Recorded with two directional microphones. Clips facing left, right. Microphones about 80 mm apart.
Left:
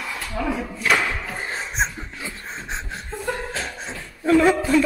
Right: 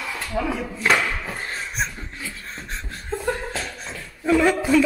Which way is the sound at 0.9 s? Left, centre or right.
Centre.